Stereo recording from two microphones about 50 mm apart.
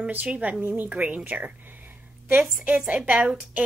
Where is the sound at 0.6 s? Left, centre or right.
Right.